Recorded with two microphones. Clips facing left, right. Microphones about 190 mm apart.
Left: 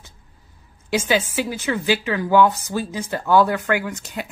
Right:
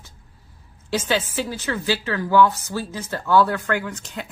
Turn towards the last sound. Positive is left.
turn(degrees=10)  # may be behind; listen again after turning